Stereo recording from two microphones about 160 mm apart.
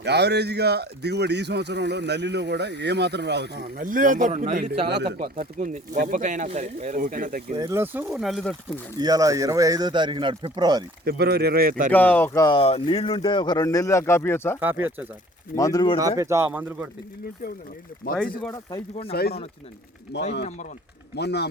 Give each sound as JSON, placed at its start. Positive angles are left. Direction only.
{"t": 0.0, "sound": "speech", "side_deg": -90}
{"t": 4.9, "sound": "speech", "side_deg": -90}
{"t": 5.4, "sound": "speech", "side_deg": -55}
{"t": 7.5, "sound": "speech", "side_deg": -20}
{"t": 9.0, "sound": "speech", "side_deg": -25}
{"t": 11.0, "sound": "speech", "side_deg": -85}
{"t": 11.9, "sound": "speech", "side_deg": 10}
{"t": 12.5, "sound": "speech", "side_deg": 35}
{"t": 14.6, "sound": "speech", "side_deg": -10}
{"t": 15.5, "sound": "speech", "side_deg": 20}
{"t": 16.0, "sound": "speech", "side_deg": -20}
{"t": 18.0, "sound": "speech", "side_deg": 60}
{"t": 19.1, "sound": "speech", "side_deg": 80}